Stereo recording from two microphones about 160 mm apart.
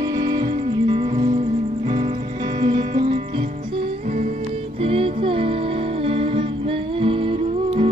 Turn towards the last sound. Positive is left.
turn(degrees=-35)  # may be behind; listen again after turning